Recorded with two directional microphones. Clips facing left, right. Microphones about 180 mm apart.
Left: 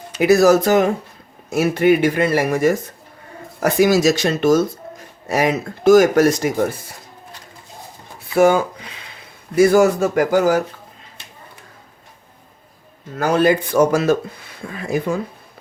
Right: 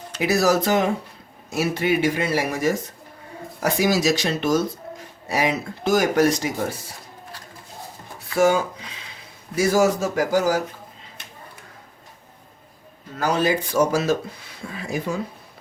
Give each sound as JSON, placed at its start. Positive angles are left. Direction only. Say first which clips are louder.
{"t": 0.2, "sound": "speech", "louder": "left 7 dB", "side_deg": 50}
{"t": 9.6, "sound": "speech", "louder": "left 6 dB", "side_deg": 55}
{"t": 13.1, "sound": "speech", "louder": "left 6 dB", "side_deg": 55}